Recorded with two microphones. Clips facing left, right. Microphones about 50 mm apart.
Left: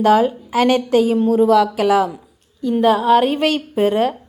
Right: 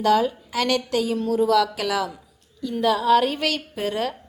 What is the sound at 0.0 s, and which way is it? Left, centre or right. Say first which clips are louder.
A woman's voice: left 6 dB; left.